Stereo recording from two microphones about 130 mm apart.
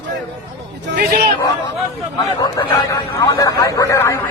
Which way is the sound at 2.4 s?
30° left (ahead or behind).